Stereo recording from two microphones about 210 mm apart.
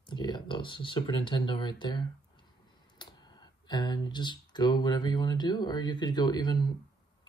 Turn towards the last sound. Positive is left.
turn(degrees=20)  # may be behind; listen again after turning